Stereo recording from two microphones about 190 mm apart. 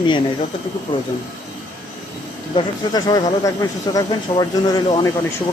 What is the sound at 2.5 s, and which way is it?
Speech, 20° left (ahead or behind).